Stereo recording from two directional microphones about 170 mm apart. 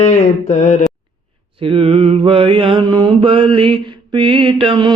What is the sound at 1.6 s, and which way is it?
Mantra, 35° right (ahead or behind).